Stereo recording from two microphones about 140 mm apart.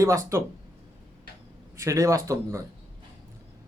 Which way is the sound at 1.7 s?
20° right (ahead or behind).